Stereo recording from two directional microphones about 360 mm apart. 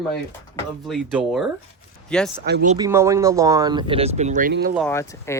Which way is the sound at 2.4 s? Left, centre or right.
Right.